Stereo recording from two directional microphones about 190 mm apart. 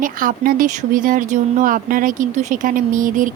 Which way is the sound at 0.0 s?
45° right (ahead or behind).